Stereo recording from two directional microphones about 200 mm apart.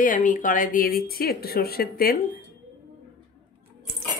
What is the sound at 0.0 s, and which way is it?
A woman's voice, 40° left (ahead or behind).